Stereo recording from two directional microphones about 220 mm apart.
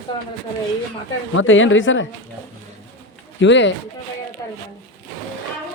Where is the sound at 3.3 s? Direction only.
55° left (ahead or behind).